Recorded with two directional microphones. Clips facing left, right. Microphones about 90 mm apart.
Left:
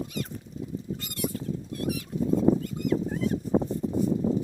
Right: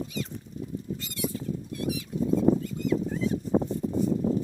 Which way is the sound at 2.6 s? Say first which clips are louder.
Even; 55° left (ahead or behind).